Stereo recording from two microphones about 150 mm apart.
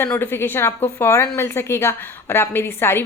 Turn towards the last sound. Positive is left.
turn(degrees=15)  # may be behind; listen again after turning